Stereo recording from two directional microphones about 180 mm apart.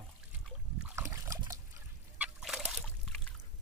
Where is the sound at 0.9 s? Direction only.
15° right (ahead or behind).